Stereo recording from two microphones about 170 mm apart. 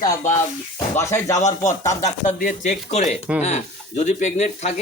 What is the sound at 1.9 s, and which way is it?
Speech, 45° left (ahead or behind).